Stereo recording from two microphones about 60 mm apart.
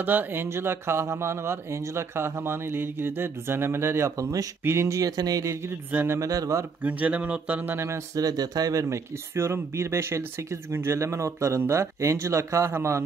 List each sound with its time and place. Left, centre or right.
0.0 s speech: right
6.0 s speech: right
6.8 s speech: right
8.2 s speech: right
8.8 s speech: right